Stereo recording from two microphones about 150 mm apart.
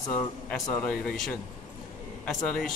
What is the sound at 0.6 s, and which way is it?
Speech, 15° left (ahead or behind).